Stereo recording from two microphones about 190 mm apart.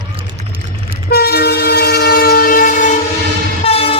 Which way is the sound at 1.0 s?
55° left (ahead or behind).